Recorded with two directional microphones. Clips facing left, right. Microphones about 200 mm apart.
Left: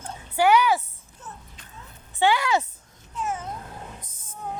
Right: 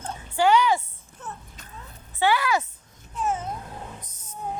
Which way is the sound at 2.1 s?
20° left (ahead or behind).